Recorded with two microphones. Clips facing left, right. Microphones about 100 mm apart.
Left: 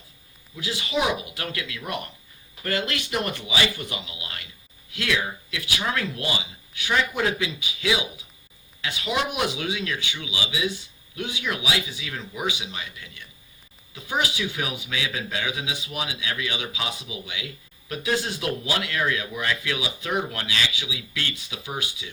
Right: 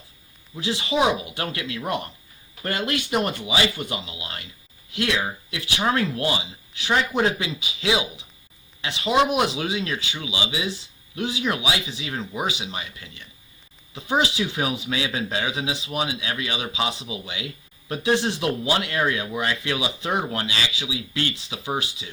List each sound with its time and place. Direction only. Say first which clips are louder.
0.5 s speech: right 3 dB; 30° right (ahead or behind)